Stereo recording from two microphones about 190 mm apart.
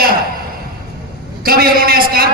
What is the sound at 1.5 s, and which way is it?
Speech, 50° right (ahead or behind).